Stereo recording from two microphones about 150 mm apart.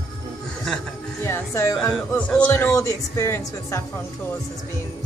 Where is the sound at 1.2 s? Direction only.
20° left (ahead or behind).